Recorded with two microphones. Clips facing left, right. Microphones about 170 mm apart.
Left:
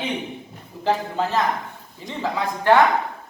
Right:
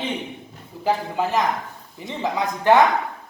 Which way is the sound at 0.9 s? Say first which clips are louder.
Even; 10° right (ahead or behind).